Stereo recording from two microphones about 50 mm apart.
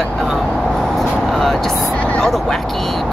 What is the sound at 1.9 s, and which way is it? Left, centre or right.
Vehicle, left.